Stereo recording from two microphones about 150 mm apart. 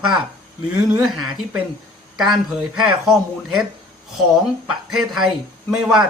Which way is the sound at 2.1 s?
5° right (ahead or behind).